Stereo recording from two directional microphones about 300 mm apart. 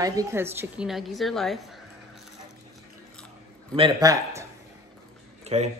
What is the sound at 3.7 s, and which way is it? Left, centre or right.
Speech, centre.